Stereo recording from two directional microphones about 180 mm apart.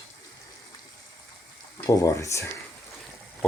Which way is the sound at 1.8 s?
15° left (ahead or behind).